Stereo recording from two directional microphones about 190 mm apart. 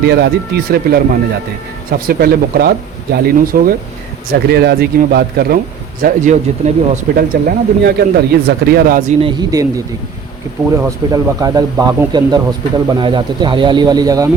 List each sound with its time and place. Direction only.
0.0 s speech: 60° right (ahead or behind)
6.0 s speech: 45° right (ahead or behind)
9.2 s speech: 20° right (ahead or behind)
10.8 s speech: 15° right (ahead or behind)